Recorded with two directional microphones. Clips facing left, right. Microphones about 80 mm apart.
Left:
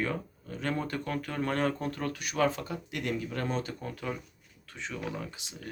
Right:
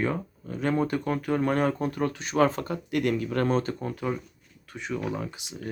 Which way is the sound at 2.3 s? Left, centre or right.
Right.